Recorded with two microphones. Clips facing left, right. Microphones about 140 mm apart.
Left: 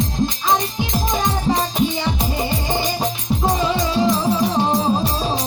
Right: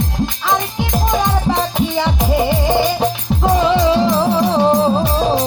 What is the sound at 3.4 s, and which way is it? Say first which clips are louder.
Music: right 6 dB; 55° right (ahead or behind).